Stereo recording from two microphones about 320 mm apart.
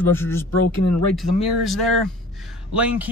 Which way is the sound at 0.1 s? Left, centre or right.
Centre.